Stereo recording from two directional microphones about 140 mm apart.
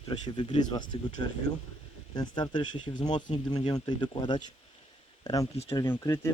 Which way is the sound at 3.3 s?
45° left (ahead or behind).